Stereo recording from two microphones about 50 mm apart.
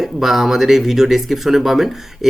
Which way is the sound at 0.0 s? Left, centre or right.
Centre.